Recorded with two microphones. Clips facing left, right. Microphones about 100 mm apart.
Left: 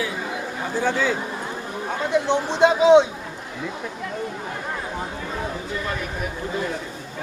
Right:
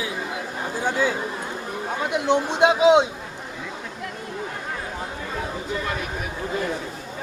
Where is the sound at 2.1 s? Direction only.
15° right (ahead or behind).